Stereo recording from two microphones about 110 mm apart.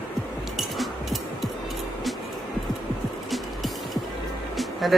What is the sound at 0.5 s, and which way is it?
Music, centre (ahead or behind).